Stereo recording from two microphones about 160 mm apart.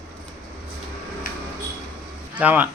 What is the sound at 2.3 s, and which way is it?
Speech, 10° right (ahead or behind).